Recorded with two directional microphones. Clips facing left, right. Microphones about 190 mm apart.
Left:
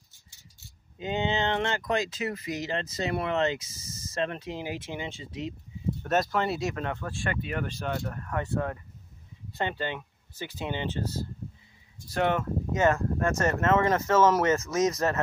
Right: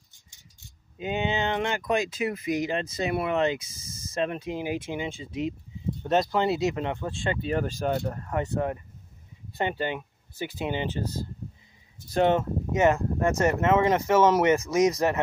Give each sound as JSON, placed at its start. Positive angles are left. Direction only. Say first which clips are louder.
{"t": 0.9, "sound": "speech", "louder": "right 1 dB", "side_deg": -15}
{"t": 8.0, "sound": "speech", "louder": "right 3 dB", "side_deg": -25}
{"t": 12.1, "sound": "speech", "louder": "right 4 dB", "side_deg": -25}